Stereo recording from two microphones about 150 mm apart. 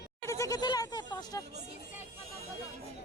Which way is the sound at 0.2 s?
20° left (ahead or behind).